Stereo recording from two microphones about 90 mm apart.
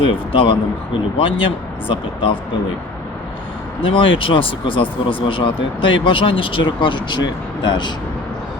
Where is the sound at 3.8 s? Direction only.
80° left; by 7.9 s 55° left (ahead or behind).